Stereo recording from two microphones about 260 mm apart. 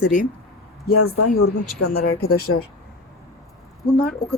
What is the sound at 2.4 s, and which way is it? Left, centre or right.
Speech, left.